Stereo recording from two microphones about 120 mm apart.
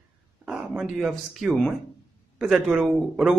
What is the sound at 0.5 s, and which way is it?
A man's voice, 10° right (ahead or behind).